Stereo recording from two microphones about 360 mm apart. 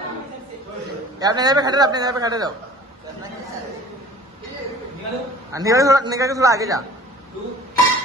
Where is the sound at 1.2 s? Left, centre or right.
Centre.